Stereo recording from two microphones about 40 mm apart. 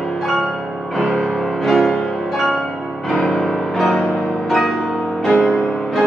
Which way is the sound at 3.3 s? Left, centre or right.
Centre.